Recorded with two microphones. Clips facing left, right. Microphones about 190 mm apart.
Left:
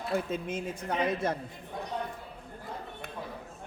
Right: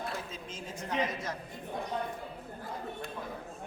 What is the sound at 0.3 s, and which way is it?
A woman's voice, 60° left (ahead or behind).